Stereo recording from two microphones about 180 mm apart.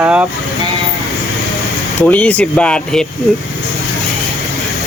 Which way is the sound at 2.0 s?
5° left (ahead or behind).